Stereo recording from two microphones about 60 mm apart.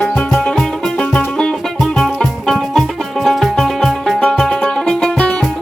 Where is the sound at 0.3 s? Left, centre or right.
Centre.